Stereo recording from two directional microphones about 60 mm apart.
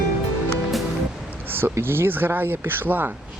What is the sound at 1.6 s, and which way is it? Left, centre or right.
Speech, right.